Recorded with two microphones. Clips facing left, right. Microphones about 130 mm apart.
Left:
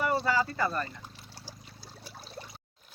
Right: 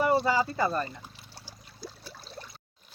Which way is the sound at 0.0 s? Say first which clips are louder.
Right 3 dB; 15° right (ahead or behind).